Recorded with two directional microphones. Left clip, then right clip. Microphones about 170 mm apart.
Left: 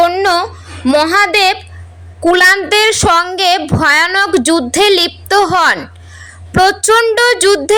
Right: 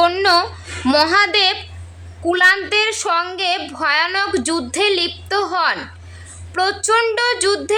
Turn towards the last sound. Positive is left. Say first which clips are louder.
# left 8 dB
turn(degrees=30)  # may be behind; listen again after turning